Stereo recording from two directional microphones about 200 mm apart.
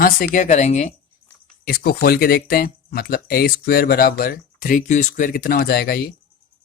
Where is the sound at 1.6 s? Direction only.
50° left (ahead or behind).